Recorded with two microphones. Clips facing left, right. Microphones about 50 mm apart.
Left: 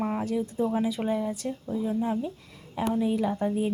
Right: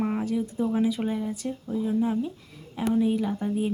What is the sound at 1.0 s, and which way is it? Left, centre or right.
Speech, centre.